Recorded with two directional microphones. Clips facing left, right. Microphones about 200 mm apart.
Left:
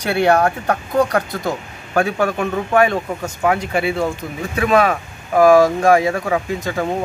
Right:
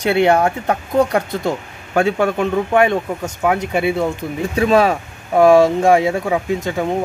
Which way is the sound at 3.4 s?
Centre (ahead or behind).